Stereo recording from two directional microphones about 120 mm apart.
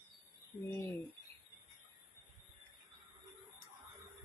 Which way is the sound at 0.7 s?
20° left (ahead or behind).